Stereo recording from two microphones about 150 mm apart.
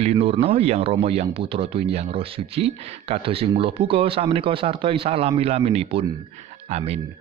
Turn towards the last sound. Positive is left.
turn(degrees=-45)  # may be behind; listen again after turning